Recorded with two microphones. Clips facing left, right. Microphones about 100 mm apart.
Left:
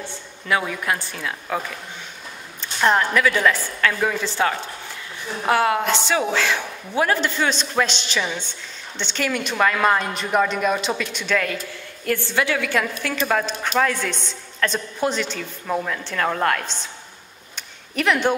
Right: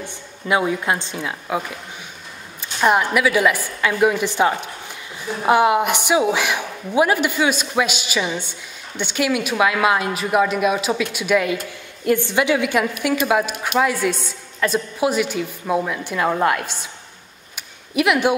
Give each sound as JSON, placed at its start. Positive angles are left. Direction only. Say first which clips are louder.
{"t": 0.0, "sound": "a woman's voice", "louder": "right 3 dB", "side_deg": -20}
{"t": 2.8, "sound": "a woman's voice", "louder": "right 1 dB", "side_deg": -10}
{"t": 17.6, "sound": "a sound", "louder": "right 5 dB", "side_deg": -10}